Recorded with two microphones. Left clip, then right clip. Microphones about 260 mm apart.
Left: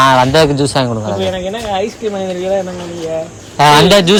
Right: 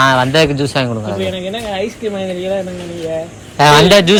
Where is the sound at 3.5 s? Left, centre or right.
Centre.